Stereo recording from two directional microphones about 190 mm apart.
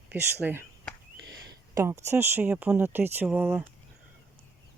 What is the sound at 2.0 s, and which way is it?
Speech, 15° right (ahead or behind).